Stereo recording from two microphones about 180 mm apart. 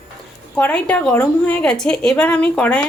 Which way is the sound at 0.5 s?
10° left (ahead or behind).